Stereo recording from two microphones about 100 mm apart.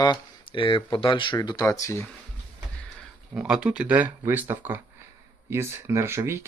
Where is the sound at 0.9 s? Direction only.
60° left (ahead or behind); by 2.0 s 30° left (ahead or behind).